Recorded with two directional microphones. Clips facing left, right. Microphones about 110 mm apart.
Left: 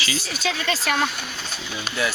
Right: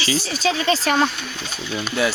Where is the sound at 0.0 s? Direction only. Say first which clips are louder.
Right 5 dB; 30° right (ahead or behind).